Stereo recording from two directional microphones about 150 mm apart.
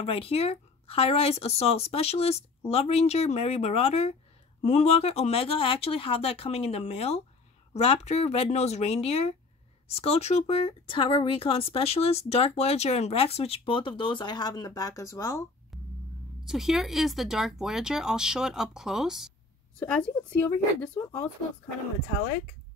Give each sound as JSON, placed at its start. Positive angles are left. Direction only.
{"t": 0.0, "sound": "speech", "side_deg": 40}
{"t": 16.4, "sound": "speech", "side_deg": 0}
{"t": 19.8, "sound": "speech", "side_deg": 10}